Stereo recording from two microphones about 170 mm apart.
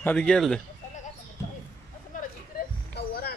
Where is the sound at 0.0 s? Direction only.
5° left (ahead or behind).